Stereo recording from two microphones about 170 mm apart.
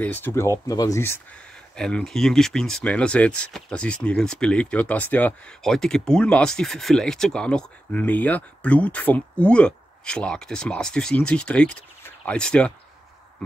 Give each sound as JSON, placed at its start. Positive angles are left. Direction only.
{"t": 0.0, "sound": "speech", "side_deg": 10}
{"t": 1.8, "sound": "speech", "side_deg": 5}